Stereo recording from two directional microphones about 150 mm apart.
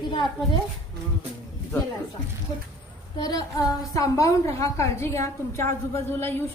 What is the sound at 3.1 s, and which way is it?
A woman's voice, 25° left (ahead or behind).